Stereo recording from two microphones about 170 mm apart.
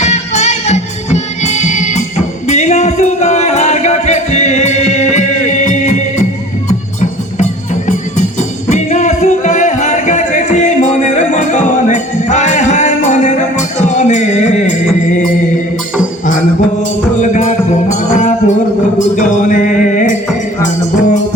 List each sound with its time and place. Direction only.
0.0 s music: 40° left (ahead or behind)
17.2 s music: 45° left (ahead or behind)